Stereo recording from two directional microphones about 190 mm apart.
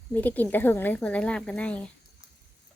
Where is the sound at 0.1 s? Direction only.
10° left (ahead or behind).